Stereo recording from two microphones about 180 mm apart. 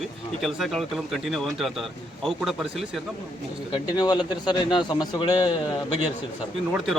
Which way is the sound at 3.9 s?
20° left (ahead or behind).